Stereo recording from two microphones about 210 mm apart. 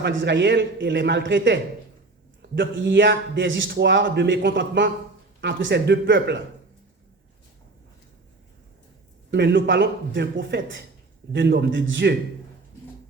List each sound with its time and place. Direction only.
0.0 s a man's voice: 60° right (ahead or behind)
9.3 s a man's voice: 55° right (ahead or behind)